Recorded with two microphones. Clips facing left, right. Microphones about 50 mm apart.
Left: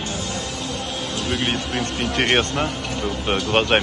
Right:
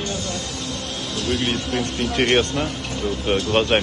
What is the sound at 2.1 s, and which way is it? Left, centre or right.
Speech, left.